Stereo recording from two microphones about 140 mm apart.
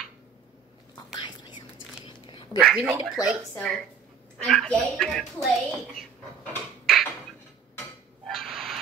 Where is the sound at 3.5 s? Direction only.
5° left (ahead or behind).